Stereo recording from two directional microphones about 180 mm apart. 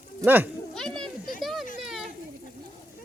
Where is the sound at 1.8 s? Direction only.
Centre (ahead or behind).